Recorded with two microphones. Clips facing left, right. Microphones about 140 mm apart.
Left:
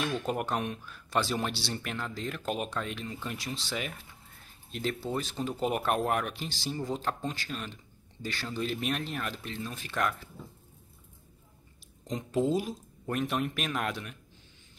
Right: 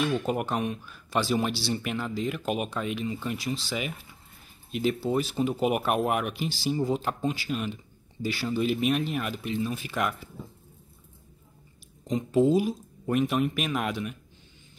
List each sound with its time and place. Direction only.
0.0 s speech: 5° right (ahead or behind)
12.1 s speech: centre (ahead or behind)